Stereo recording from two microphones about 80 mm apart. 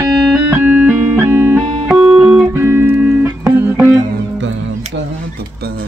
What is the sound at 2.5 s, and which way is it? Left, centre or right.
Music, right.